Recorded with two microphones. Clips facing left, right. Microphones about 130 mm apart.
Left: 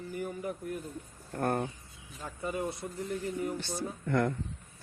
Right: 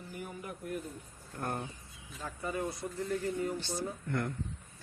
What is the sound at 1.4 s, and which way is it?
Speech, 55° left (ahead or behind).